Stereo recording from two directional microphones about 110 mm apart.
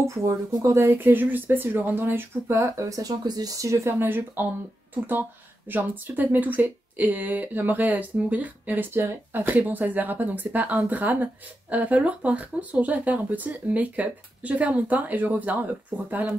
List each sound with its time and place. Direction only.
0.0 s speech: 30° right (ahead or behind)
5.7 s speech: 15° right (ahead or behind)